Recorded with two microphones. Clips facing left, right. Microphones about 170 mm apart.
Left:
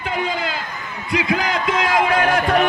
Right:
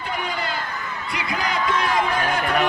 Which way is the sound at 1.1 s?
90° left.